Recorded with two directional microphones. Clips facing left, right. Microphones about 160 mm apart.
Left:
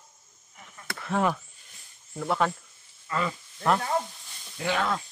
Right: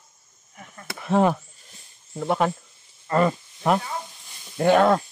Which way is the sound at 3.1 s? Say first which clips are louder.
Right 9 dB; 50° right (ahead or behind).